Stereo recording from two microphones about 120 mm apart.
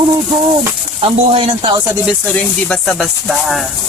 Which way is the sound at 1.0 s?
50° right (ahead or behind).